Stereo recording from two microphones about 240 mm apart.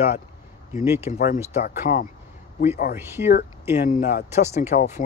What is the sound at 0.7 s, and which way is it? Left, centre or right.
Speech, centre.